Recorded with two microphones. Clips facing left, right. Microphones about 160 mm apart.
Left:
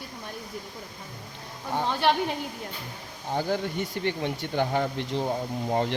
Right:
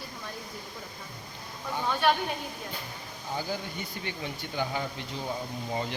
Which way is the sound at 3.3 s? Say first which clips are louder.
Left 7 dB; 65° left (ahead or behind).